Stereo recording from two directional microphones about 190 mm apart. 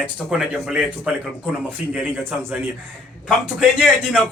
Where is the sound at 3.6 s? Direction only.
5° right (ahead or behind).